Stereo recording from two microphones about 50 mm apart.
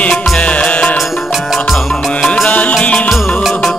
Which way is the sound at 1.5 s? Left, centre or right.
Centre.